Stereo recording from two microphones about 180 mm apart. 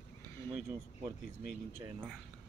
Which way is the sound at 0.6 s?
15° right (ahead or behind).